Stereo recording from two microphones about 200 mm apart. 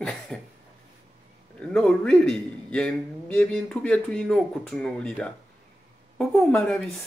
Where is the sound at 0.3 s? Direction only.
Centre (ahead or behind).